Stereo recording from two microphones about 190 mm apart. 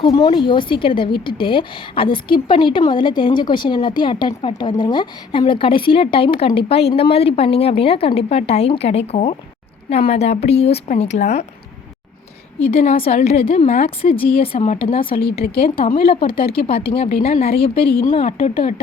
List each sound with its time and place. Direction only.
0.0 s a woman's voice: 25° left (ahead or behind)
12.8 s a woman's voice: 35° left (ahead or behind)
13.7 s a woman's voice: 45° left (ahead or behind)
14.0 s a woman's voice: 30° left (ahead or behind)
15.2 s a woman's voice: 55° left (ahead or behind)
16.0 s a woman's voice: 30° left (ahead or behind)
17.8 s a woman's voice: 55° left (ahead or behind)
18.1 s a woman's voice: 30° left (ahead or behind)